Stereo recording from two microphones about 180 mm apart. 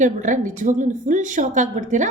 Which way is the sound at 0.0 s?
45° right (ahead or behind).